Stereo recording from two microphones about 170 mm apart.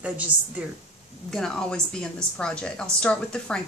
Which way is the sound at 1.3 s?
5° left (ahead or behind).